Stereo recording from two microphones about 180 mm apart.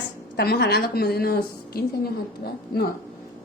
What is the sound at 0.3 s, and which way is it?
A woman's voice, 60° left (ahead or behind).